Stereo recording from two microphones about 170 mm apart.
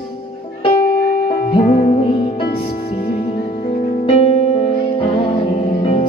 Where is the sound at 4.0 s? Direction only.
35° left (ahead or behind).